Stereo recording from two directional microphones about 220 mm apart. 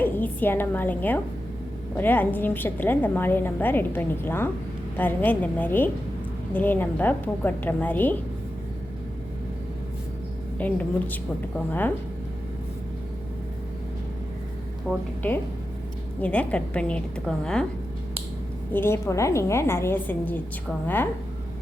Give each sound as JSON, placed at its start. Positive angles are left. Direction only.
{"t": 0.0, "sound": "a woman's voice", "side_deg": 10}
{"t": 10.6, "sound": "a woman's voice", "side_deg": 5}
{"t": 14.8, "sound": "a woman's voice", "side_deg": 10}
{"t": 18.7, "sound": "a woman's voice", "side_deg": 10}